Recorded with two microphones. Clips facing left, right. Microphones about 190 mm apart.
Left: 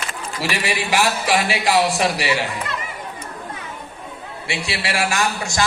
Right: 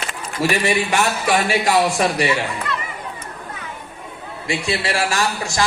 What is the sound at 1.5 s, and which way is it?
Speech, 45° right (ahead or behind).